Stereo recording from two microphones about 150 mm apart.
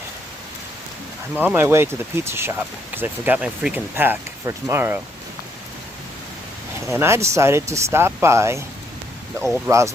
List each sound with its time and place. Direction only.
1.4 s speech: 15° right (ahead or behind)
6.9 s speech: 15° right (ahead or behind)
9.6 s speech: 20° right (ahead or behind)